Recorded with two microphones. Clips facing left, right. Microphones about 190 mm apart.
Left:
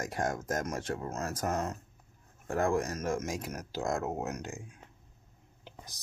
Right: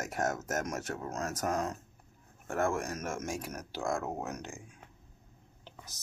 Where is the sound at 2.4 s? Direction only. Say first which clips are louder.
Left 2 dB; 35° left (ahead or behind).